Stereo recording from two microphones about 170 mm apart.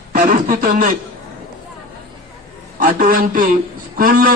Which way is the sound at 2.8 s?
55° right (ahead or behind).